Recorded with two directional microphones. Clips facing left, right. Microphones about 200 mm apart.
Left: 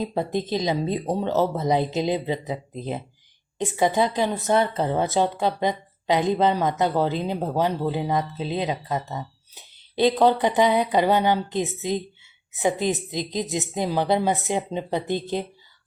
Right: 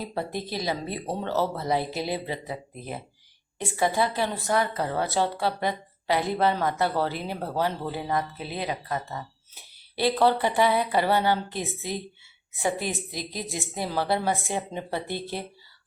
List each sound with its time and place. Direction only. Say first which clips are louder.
0.0 s a woman's voice: left 6 dB; 20° left (ahead or behind)